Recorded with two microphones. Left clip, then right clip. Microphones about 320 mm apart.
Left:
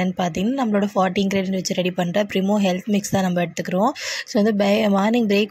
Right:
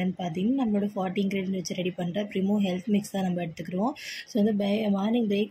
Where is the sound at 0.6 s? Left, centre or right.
Left.